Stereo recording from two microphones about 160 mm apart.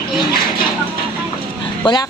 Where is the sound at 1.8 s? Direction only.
25° left (ahead or behind).